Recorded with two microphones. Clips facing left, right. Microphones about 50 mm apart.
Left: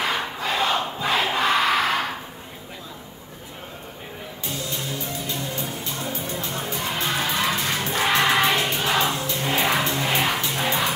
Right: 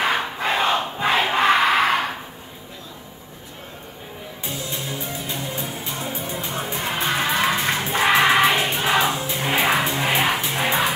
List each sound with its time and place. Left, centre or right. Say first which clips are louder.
0.0 s crowd: right 3 dB; right
4.5 s music: right 1 dB; centre
8.1 s music: right 3 dB; centre